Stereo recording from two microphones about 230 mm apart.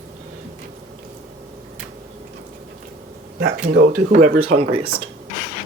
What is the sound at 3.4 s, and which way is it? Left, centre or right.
Speech, right.